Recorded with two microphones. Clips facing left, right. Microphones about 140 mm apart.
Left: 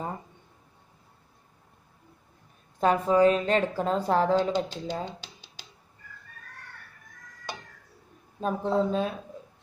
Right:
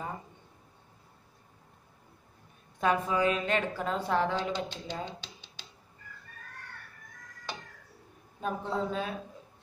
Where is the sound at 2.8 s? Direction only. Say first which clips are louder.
Left 6 dB; 35° left (ahead or behind).